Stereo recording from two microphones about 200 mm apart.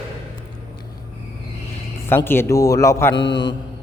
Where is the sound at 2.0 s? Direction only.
10° left (ahead or behind).